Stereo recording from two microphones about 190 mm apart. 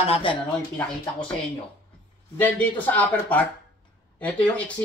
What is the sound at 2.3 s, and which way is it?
Speech, 10° left (ahead or behind).